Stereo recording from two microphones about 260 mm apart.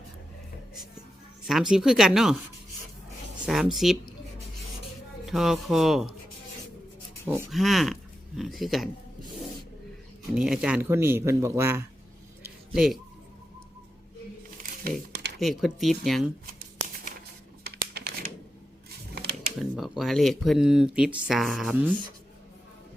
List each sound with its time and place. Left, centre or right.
1.5 s speech: centre
3.4 s speech: centre
5.2 s speech: centre
7.3 s speech: centre
10.3 s speech: centre
12.4 s a sound: centre
14.6 s a sound: right
15.4 s speech: centre
17.6 s crumpling: right
19.1 s a sound: right
19.7 s speech: centre